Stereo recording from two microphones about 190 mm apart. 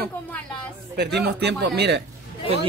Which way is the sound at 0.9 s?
60° right (ahead or behind).